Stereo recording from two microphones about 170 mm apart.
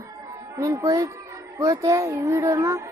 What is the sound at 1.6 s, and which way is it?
Music, 20° right (ahead or behind).